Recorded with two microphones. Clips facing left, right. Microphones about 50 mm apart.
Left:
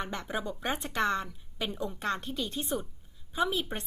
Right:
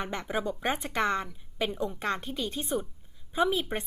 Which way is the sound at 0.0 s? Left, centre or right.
Right.